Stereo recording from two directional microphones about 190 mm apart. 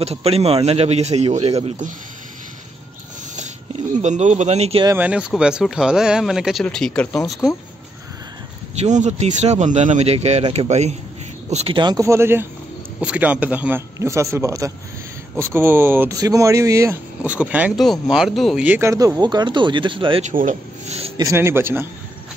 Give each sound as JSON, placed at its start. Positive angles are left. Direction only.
{"t": 0.0, "sound": "speech", "side_deg": -30}
{"t": 3.9, "sound": "speech", "side_deg": -40}
{"t": 4.8, "sound": "speech", "side_deg": -10}
{"t": 8.8, "sound": "speech", "side_deg": -40}
{"t": 20.2, "sound": "speech", "side_deg": -40}
{"t": 21.2, "sound": "speech", "side_deg": -15}